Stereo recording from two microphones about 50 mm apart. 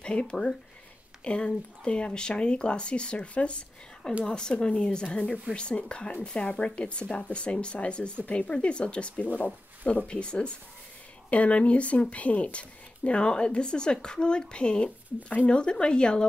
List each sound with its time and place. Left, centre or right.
0.0 s speech: centre